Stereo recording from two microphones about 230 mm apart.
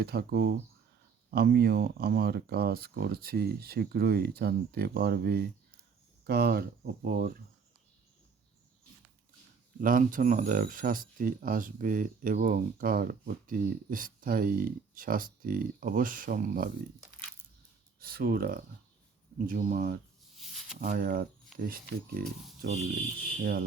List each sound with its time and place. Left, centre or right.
0.0 s speech: right
9.8 s speech: right
18.0 s speech: right
20.3 s a sound: centre
20.8 s speech: right